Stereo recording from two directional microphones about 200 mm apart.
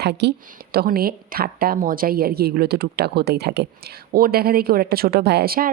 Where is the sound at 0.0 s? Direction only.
55° right (ahead or behind).